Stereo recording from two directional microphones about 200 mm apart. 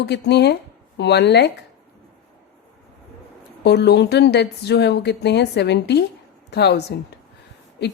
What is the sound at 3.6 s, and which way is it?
Speech, 55° left (ahead or behind).